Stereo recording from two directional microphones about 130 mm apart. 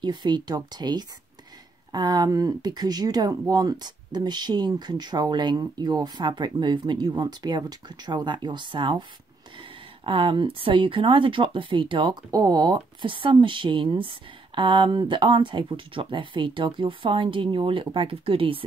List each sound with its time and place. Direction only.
0.0 s speech: 35° right (ahead or behind)